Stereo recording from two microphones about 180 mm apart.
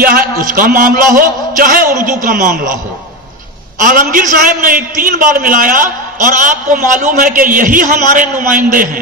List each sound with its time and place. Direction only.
0.0 s a man's voice: 50° right (ahead or behind)
3.8 s a man's voice: 50° right (ahead or behind)